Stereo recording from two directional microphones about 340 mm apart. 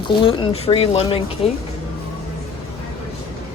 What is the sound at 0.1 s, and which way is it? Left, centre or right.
Speech, centre.